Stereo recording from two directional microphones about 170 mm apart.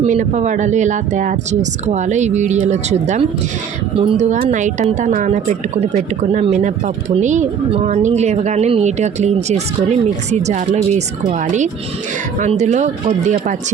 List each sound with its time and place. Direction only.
0.0 s speech: 45° right (ahead or behind)